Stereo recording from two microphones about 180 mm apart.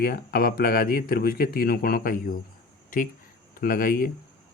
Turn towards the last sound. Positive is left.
turn(degrees=50)  # may be behind; listen again after turning